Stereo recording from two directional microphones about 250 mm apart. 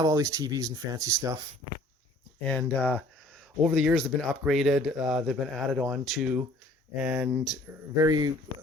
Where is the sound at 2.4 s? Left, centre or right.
Centre.